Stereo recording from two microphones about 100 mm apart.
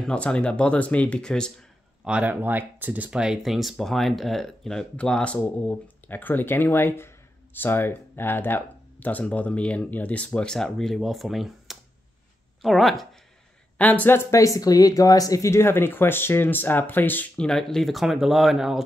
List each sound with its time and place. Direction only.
0.0 s speech: 10° left (ahead or behind)
2.0 s speech: 15° right (ahead or behind)
13.7 s speech: 15° left (ahead or behind)
14.3 s speech: 35° left (ahead or behind); by 17.5 s 20° left (ahead or behind)
17.5 s speech: 5° left (ahead or behind)